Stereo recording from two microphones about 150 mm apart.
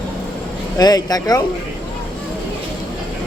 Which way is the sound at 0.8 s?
25° left (ahead or behind).